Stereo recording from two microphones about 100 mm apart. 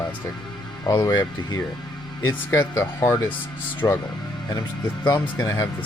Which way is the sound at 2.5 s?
25° left (ahead or behind).